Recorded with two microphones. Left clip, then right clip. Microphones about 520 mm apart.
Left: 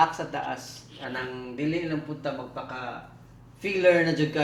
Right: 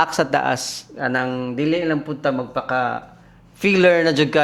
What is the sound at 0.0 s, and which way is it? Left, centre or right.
Speech, right.